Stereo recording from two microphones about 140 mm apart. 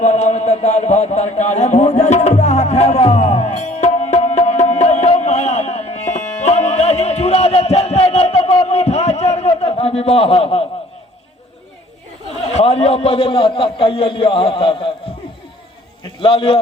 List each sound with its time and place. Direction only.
0.0 s a sound: 55° left (ahead or behind)
12.5 s a man's voice: 50° left (ahead or behind)
16.2 s a man's voice: 40° left (ahead or behind)